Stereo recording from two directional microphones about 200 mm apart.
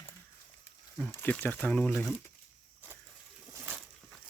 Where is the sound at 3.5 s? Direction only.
10° right (ahead or behind).